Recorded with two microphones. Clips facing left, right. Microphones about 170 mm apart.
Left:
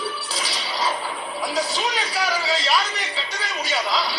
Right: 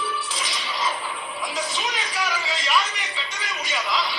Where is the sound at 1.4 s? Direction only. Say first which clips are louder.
Left 5 dB; 35° left (ahead or behind).